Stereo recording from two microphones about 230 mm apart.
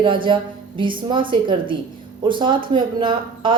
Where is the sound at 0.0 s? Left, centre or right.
Right.